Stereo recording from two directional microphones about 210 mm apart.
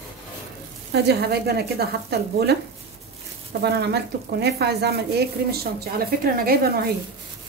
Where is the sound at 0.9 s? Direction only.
50° right (ahead or behind).